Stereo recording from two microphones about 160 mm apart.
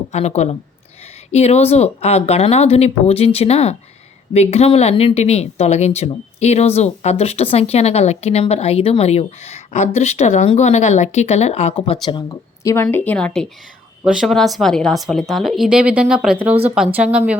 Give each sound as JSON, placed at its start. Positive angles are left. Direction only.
{"t": 0.1, "sound": "speech", "side_deg": 45}
{"t": 12.0, "sound": "a woman's voice", "side_deg": 25}